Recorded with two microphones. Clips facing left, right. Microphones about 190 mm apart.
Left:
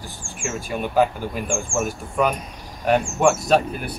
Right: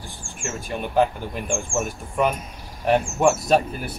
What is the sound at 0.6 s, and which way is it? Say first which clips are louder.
Speech: left 1 dB; 5° left (ahead or behind).